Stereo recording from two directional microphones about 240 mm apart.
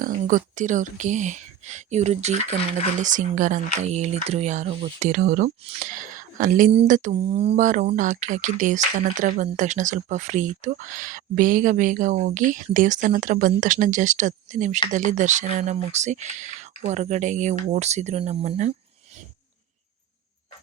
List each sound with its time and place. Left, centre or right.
0.0 s speech: right